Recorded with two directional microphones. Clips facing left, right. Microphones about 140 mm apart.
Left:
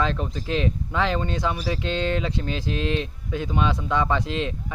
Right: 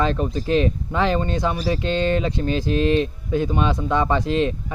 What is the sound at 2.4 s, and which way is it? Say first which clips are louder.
Speech: right 6 dB; 50° right (ahead or behind).